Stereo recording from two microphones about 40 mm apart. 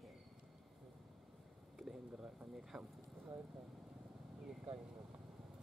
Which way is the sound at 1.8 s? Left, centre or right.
Centre.